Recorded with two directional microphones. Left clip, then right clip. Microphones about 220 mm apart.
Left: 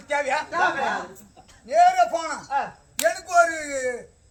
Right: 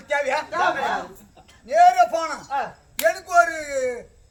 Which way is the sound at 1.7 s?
15° right (ahead or behind).